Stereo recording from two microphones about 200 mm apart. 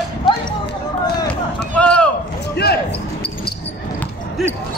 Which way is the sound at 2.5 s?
55° left (ahead or behind).